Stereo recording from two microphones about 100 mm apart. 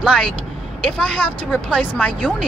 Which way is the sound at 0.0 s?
5° left (ahead or behind).